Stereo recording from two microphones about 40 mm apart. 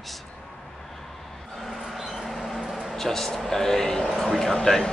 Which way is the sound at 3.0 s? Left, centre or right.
Centre.